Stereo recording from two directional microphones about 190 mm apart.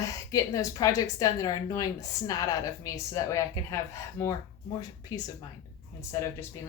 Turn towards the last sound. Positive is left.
turn(degrees=15)  # may be behind; listen again after turning